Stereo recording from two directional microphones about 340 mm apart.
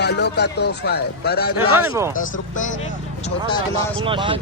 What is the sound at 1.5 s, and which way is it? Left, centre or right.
Speech, centre.